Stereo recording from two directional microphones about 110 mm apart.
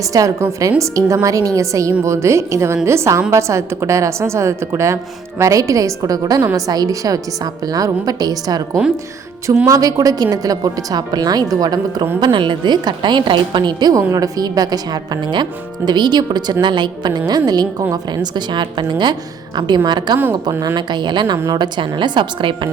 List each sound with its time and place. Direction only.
0.0 s a woman's voice: 30° right (ahead or behind)
9.6 s a woman's voice: 30° right (ahead or behind)
12.2 s a woman's voice: 45° right (ahead or behind)
20.4 s a woman's voice: 30° right (ahead or behind)
20.7 s a woman's voice: 45° right (ahead or behind)